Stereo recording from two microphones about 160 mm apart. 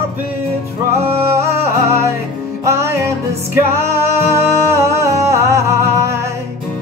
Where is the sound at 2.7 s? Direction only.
15° right (ahead or behind).